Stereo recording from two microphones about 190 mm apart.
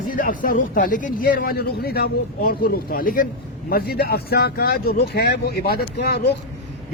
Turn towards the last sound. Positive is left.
turn(degrees=60)  # may be behind; listen again after turning